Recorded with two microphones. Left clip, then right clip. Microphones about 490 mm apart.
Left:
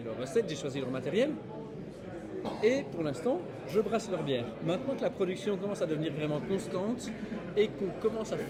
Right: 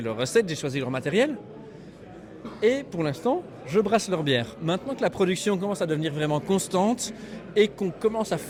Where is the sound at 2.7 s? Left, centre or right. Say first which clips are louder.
Right 6 dB; right.